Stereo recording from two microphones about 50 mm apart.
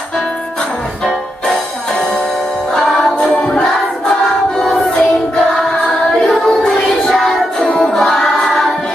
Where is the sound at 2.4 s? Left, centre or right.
Left.